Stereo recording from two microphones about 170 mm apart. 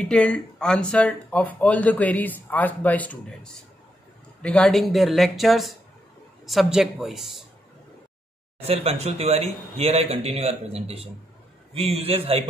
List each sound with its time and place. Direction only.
0.1 s speech: 5° left (ahead or behind)
8.6 s speech: 35° right (ahead or behind)